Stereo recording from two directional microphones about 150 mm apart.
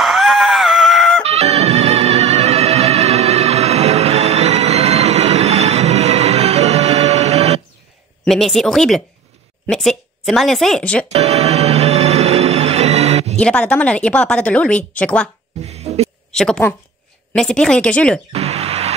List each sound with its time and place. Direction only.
0.0 s screaming: centre (ahead or behind)
1.2 s music: 45° right (ahead or behind)
8.3 s speech: centre (ahead or behind)
11.1 s music: 45° right (ahead or behind)
13.4 s speech: 5° left (ahead or behind)
15.6 s a sound: 45° right (ahead or behind)
16.3 s a woman's voice: 5° left (ahead or behind)
18.3 s speech: 45° right (ahead or behind)